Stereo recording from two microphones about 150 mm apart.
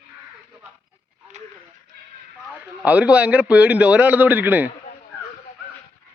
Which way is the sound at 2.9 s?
10° right (ahead or behind).